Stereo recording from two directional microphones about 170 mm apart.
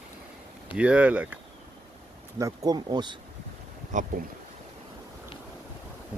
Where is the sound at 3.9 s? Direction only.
45° right (ahead or behind).